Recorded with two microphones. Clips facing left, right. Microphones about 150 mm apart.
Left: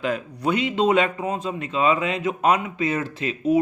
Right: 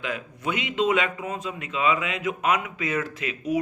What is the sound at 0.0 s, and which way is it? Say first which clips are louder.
A man's voice: left 6 dB; 35° left (ahead or behind).